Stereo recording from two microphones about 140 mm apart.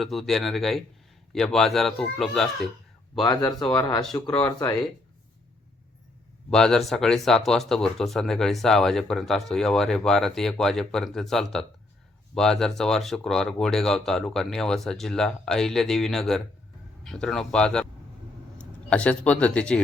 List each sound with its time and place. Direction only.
0.0 s speech: centre (ahead or behind)
3.2 s speech: 30° left (ahead or behind)
3.6 s speech: 5° left (ahead or behind)
6.5 s speech: 5° left (ahead or behind)